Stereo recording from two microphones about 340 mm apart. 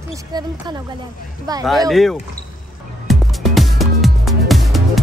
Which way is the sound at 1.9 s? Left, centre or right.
Centre.